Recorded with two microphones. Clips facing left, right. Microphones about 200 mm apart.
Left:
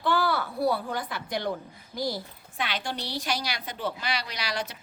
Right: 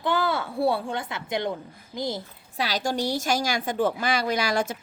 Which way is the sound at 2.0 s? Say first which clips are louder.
Right 1 dB; 20° right (ahead or behind).